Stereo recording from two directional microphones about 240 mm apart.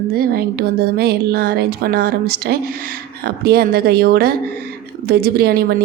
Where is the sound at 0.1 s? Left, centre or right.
Right.